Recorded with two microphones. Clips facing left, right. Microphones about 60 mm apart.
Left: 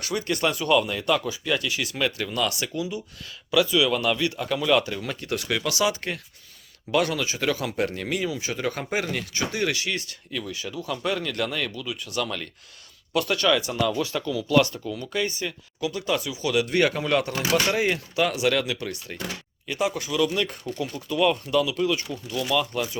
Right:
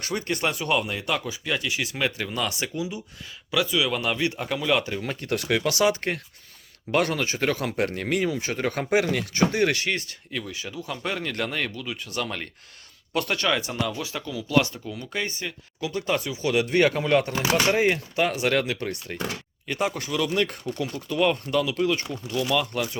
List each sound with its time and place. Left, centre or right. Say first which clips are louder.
0.0 s speech: left 1 dB; right
4.5 s speech: left 3 dB; centre
4.8 s speech: even; right
5.2 s speech: right 3 dB; right
10.3 s speech: left 1 dB; right